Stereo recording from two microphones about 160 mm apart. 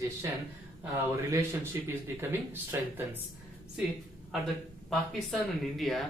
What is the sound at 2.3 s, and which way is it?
Speech, 15° right (ahead or behind).